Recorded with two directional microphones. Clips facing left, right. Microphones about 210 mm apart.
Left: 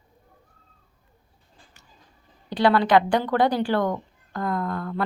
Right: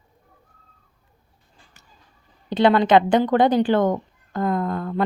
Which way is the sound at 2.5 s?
20° right (ahead or behind).